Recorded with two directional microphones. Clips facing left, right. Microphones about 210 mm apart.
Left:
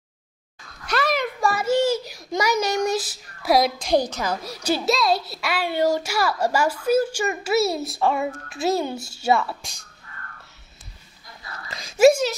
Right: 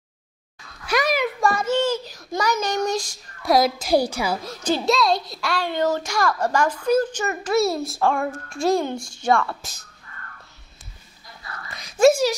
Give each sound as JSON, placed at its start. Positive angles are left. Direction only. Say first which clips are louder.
{"t": 0.8, "sound": "a sound", "louder": "right 2 dB", "side_deg": -10}
{"t": 4.5, "sound": "a child's voice", "louder": "even", "side_deg": 10}
{"t": 12.1, "sound": "speech", "louder": "right 1 dB", "side_deg": -10}